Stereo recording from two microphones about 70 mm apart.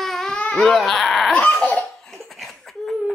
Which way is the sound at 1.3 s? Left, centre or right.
Centre.